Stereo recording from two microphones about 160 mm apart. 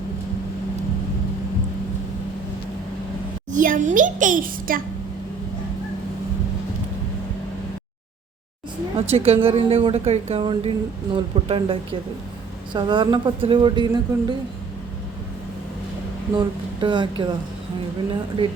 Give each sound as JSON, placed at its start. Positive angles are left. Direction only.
{"t": 3.5, "sound": "a sound", "side_deg": -55}
{"t": 9.0, "sound": "speech", "side_deg": -40}
{"t": 16.3, "sound": "speech", "side_deg": -25}